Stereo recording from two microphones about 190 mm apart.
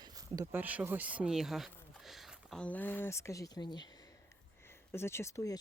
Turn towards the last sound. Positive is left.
turn(degrees=15)  # may be behind; listen again after turning